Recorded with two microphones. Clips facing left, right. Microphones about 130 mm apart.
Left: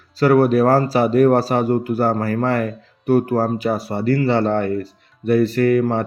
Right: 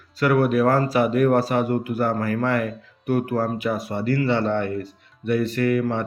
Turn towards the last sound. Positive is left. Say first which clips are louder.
# left 5 dB
turn(degrees=35)  # may be behind; listen again after turning